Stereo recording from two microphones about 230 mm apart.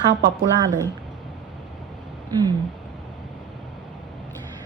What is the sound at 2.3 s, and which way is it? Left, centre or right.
Speech, centre.